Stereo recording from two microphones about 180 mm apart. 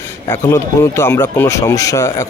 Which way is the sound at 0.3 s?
15° left (ahead or behind).